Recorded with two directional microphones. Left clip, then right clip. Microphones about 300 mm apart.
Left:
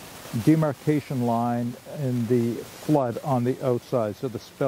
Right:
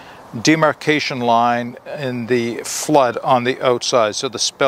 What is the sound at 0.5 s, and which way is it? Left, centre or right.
Speech, centre.